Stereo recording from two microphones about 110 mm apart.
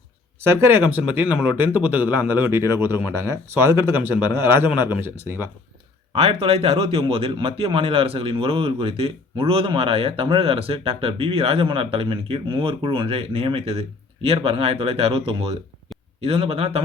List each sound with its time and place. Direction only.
0.3 s speech: 25° right (ahead or behind)
6.1 s a man's voice: 65° right (ahead or behind)